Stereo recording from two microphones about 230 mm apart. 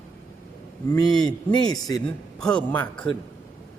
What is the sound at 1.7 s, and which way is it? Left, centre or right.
Speech, centre.